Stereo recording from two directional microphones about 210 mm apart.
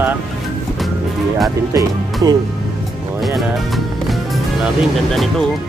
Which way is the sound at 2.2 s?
15° right (ahead or behind).